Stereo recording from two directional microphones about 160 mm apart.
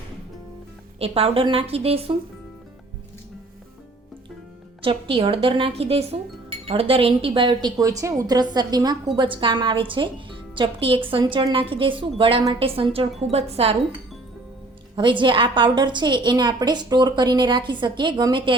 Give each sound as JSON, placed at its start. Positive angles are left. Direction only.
{"t": 0.9, "sound": "a woman's voice", "side_deg": -40}
{"t": 4.8, "sound": "a woman's voice", "side_deg": -35}
{"t": 14.9, "sound": "a woman's voice", "side_deg": -30}